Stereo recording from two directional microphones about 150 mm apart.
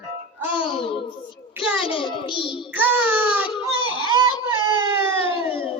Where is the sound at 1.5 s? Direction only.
5° right (ahead or behind).